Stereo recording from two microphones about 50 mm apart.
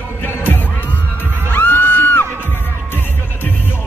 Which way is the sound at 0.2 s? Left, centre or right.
Left.